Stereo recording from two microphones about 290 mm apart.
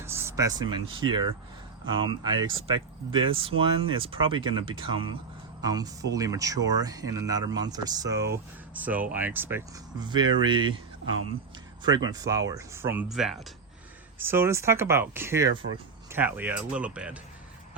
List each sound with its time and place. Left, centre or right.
0.0 s speech: centre
11.8 s speech: centre